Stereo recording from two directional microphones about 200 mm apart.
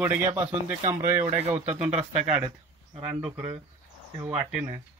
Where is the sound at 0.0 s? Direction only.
10° right (ahead or behind).